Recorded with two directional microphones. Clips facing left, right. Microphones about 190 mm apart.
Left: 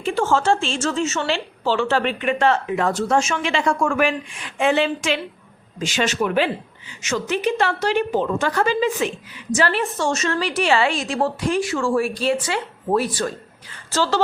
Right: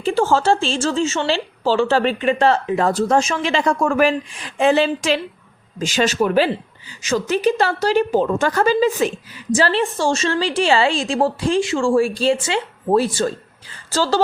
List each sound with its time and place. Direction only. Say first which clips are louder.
0.0 s a woman's voice: right 3 dB; 35° right (ahead or behind)